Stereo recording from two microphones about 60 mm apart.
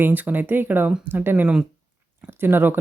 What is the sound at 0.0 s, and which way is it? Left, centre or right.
Speech, right.